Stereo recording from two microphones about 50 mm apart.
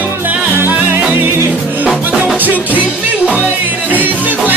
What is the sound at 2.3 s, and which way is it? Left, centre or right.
Music, right.